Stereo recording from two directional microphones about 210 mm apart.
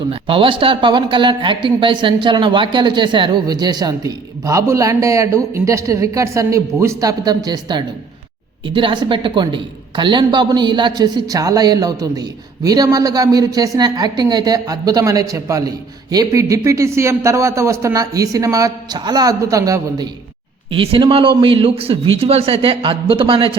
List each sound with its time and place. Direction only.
0.1 s a man's voice: 25° right (ahead or behind)